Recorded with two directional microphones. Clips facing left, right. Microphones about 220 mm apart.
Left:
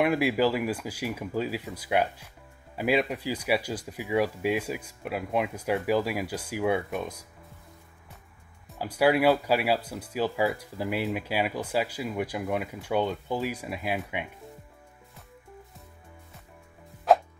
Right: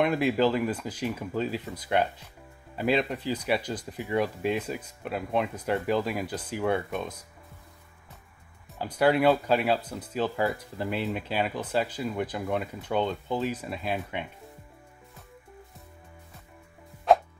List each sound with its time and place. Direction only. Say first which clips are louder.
0.0 s speech: even; 10° left (ahead or behind)
8.6 s speech: even; 5° left (ahead or behind)